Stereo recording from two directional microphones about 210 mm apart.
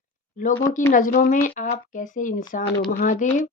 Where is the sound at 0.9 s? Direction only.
40° left (ahead or behind).